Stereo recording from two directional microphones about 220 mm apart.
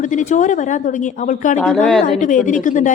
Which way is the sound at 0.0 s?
35° left (ahead or behind).